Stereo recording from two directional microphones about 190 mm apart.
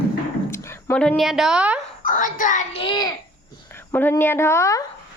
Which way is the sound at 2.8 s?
20° left (ahead or behind).